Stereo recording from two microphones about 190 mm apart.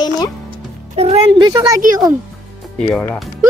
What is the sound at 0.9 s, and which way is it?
Music, 30° right (ahead or behind).